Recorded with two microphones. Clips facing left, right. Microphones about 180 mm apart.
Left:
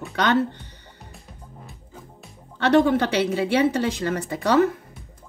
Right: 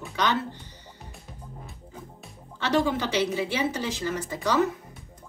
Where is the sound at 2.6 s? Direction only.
60° left (ahead or behind).